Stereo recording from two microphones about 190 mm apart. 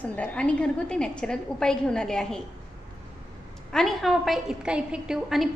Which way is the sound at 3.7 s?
Centre (ahead or behind).